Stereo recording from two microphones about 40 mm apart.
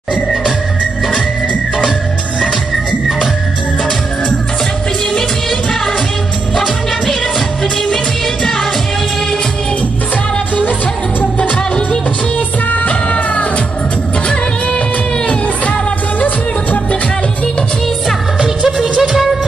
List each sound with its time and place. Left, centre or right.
11.3 s music: left
12.7 s music of bollywood: left
18.9 s music: centre